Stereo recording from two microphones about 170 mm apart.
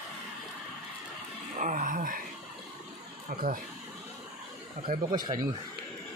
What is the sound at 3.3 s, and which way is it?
Speech, 60° right (ahead or behind).